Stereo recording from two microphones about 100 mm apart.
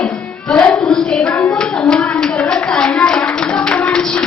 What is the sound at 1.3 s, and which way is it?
Clapping, 15° left (ahead or behind).